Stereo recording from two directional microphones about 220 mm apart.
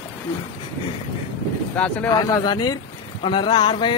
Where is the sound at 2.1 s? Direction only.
15° left (ahead or behind).